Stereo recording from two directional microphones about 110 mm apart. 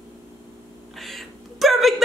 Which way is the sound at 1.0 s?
Centre (ahead or behind).